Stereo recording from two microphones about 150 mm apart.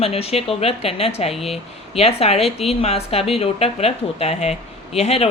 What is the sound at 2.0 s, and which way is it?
Speech, 40° left (ahead or behind).